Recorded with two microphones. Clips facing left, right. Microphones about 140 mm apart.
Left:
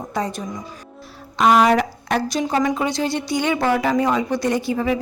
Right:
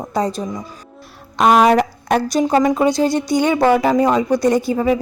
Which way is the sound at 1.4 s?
50° right (ahead or behind).